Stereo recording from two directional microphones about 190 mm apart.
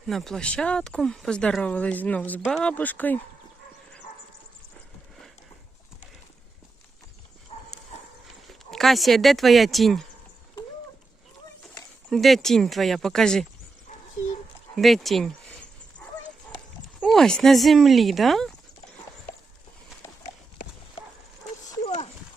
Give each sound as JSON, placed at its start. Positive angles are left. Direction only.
{"t": 0.1, "sound": "speech", "side_deg": 0}
{"t": 7.5, "sound": "clip-clop", "side_deg": 30}
{"t": 8.4, "sound": "speech", "side_deg": 0}
{"t": 12.1, "sound": "speech", "side_deg": 0}
{"t": 14.8, "sound": "speech", "side_deg": 0}
{"t": 17.0, "sound": "speech", "side_deg": 5}
{"t": 21.8, "sound": "dog", "side_deg": 35}